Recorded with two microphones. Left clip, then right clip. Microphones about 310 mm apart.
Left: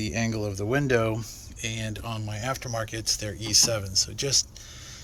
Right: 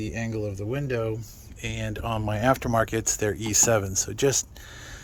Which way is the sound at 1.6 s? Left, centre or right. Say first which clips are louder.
Right 2 dB; centre.